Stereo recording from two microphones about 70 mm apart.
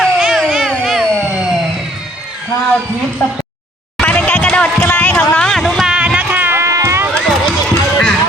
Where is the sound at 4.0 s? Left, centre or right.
Centre.